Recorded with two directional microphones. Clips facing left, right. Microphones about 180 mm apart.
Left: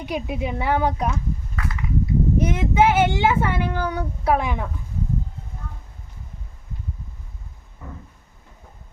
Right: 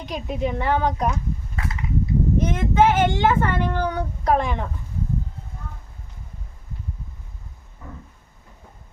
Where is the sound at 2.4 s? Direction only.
10° left (ahead or behind).